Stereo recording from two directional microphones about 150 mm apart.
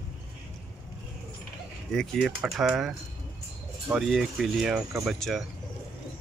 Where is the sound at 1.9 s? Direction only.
5° left (ahead or behind).